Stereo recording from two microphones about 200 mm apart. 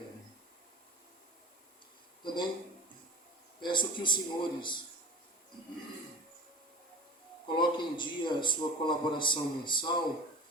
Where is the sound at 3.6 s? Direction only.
25° left (ahead or behind).